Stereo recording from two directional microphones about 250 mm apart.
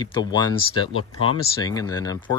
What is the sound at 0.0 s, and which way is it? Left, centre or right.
Speech, centre.